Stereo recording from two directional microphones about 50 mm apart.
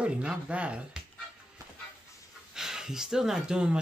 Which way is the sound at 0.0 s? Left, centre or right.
Right.